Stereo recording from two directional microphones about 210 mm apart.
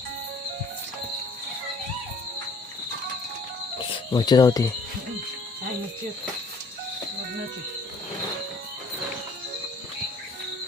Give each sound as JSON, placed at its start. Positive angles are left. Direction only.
{"t": 3.8, "sound": "speech", "side_deg": 20}